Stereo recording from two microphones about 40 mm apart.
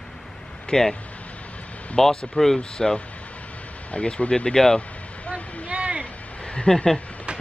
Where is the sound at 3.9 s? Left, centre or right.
Left.